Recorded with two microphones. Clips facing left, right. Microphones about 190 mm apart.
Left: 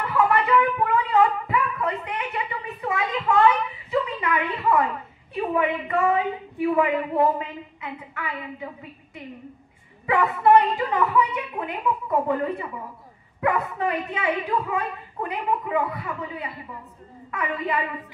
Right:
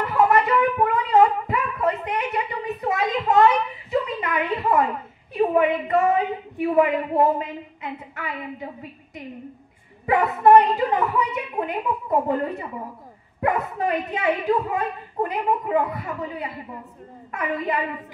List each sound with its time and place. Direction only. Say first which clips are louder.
0.1 s a sound: right 1 dB; 40° right (ahead or behind)
5.5 s a child's voice: right 2 dB; 40° right (ahead or behind)
10.0 s a child's voice: right 2 dB; 40° right (ahead or behind)